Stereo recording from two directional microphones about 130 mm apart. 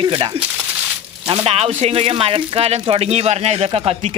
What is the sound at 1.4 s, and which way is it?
Speech, 50° right (ahead or behind).